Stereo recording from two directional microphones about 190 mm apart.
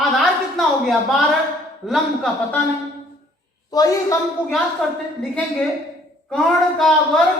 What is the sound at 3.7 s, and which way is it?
Speech, 20° left (ahead or behind).